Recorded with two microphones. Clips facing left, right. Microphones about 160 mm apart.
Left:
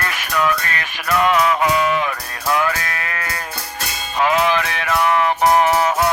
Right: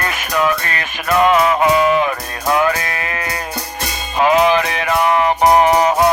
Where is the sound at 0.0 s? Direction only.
25° right (ahead or behind).